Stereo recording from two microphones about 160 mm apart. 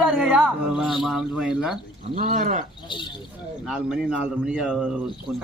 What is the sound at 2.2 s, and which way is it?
Speech, 50° right (ahead or behind).